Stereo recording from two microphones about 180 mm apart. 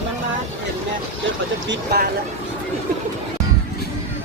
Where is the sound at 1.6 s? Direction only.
60° right (ahead or behind).